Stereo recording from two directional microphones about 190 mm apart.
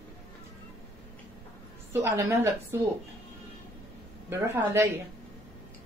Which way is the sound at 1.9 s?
10° right (ahead or behind).